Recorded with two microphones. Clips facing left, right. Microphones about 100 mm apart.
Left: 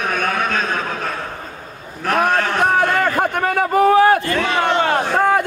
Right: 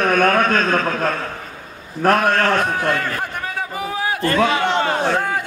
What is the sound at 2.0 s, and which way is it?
Speech, 45° right (ahead or behind).